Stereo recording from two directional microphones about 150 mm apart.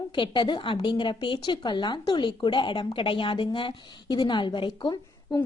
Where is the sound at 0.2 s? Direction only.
30° left (ahead or behind).